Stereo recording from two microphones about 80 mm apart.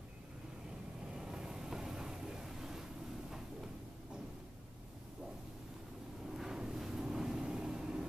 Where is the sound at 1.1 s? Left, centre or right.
Centre.